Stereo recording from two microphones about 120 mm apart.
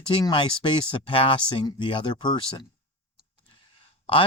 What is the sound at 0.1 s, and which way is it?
Speech, 40° left (ahead or behind).